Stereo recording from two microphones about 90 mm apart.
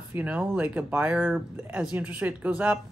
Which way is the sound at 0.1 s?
15° right (ahead or behind).